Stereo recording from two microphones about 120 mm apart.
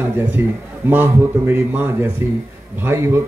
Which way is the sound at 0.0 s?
15° right (ahead or behind).